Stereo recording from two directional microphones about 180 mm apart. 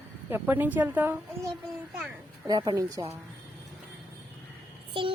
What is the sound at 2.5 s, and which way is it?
Speech, 20° right (ahead or behind).